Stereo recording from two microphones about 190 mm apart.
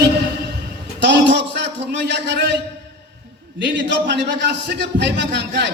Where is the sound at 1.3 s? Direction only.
65° right (ahead or behind).